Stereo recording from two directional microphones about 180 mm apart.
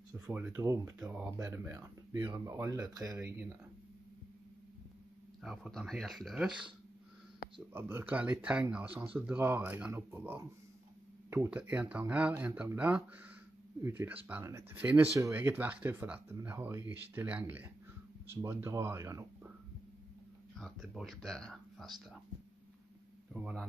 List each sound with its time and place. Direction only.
0.3 s speech: 15° right (ahead or behind)
5.4 s speech: centre (ahead or behind)
7.7 s speech: 10° right (ahead or behind)
20.5 s speech: centre (ahead or behind)